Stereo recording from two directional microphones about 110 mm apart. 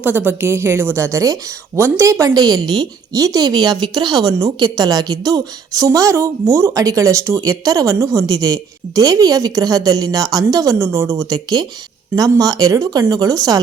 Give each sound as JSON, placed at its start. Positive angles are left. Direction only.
{"t": 0.0, "sound": "a woman's voice", "side_deg": -15}